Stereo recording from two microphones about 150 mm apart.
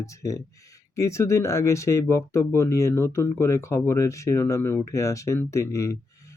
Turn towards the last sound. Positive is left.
turn(degrees=20)  # may be behind; listen again after turning